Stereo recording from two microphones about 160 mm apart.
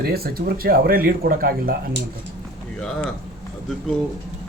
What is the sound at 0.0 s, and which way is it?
Speech, 70° right (ahead or behind).